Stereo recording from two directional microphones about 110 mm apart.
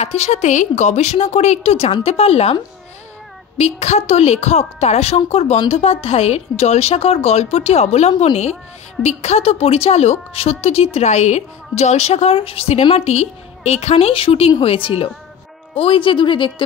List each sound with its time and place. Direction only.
0.0 s a woman's voice: 85° left; by 2.5 s 65° left (ahead or behind)
3.5 s a woman's voice: 85° left; by 16.6 s 50° left (ahead or behind)